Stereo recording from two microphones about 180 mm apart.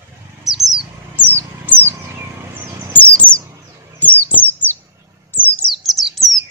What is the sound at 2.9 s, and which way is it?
Bird, 5° left (ahead or behind).